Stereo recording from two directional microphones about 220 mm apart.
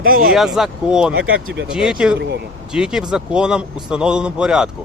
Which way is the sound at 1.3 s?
65° right (ahead or behind).